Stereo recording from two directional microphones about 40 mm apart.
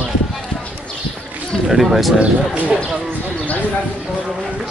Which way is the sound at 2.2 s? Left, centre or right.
Right.